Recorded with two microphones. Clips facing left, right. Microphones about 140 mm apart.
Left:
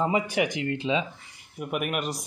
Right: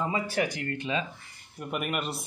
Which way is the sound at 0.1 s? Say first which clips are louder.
Left 4 dB; 20° left (ahead or behind).